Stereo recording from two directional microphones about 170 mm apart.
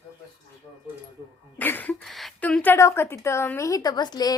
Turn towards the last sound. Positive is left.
turn(degrees=25)  # may be behind; listen again after turning